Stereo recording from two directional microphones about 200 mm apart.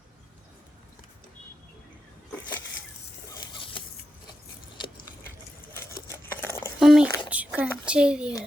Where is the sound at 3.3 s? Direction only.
25° left (ahead or behind).